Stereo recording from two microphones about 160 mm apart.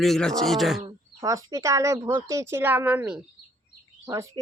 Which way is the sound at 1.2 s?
20° right (ahead or behind).